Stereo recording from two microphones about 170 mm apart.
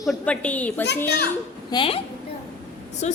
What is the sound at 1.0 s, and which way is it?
Speech, 75° left (ahead or behind).